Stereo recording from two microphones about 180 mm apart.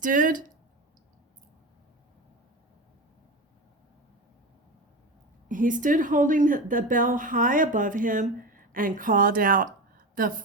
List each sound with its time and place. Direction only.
0.0 s a woman's voice: 45° right (ahead or behind)
5.5 s a woman's voice: 45° right (ahead or behind)